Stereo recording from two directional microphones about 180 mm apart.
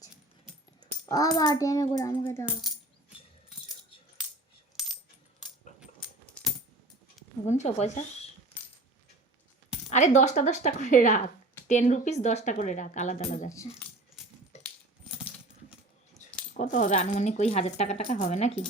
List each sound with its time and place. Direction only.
1.0 s a child's voice: 20° left (ahead or behind)
4.8 s coin: centre (ahead or behind)
7.4 s speech: 40° left (ahead or behind)
9.9 s speech: 40° left (ahead or behind)
13.5 s speech: 15° left (ahead or behind)
14.5 s coin: 40° left (ahead or behind)
16.2 s keys jangling: 40° left (ahead or behind)
16.6 s speech: 45° left (ahead or behind)